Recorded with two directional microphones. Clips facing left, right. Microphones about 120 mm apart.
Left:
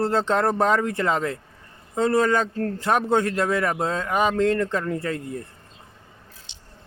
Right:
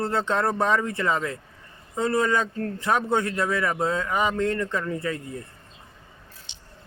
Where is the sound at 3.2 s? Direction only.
50° left (ahead or behind); by 4.6 s 70° left (ahead or behind).